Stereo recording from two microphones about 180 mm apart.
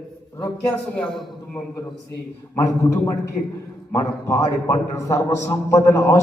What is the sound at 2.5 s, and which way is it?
A man's voice, 15° left (ahead or behind).